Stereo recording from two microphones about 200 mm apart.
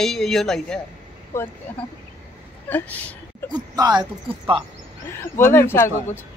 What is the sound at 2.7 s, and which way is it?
Speech, 10° left (ahead or behind).